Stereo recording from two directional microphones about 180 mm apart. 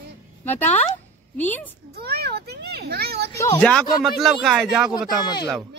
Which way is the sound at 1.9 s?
60° right (ahead or behind).